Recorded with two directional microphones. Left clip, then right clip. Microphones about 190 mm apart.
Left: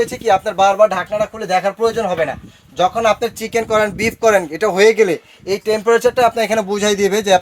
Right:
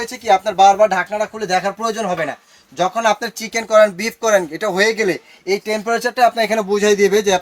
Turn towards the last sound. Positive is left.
turn(degrees=35)  # may be behind; listen again after turning